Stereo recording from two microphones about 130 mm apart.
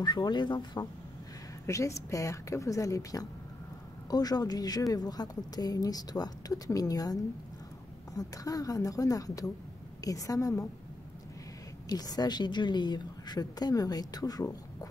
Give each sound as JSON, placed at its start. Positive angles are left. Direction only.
{"t": 0.0, "sound": "a woman's voice", "side_deg": 35}
{"t": 1.7, "sound": "a woman's voice", "side_deg": 25}
{"t": 8.2, "sound": "a woman's voice", "side_deg": 25}
{"t": 11.9, "sound": "a woman's voice", "side_deg": 30}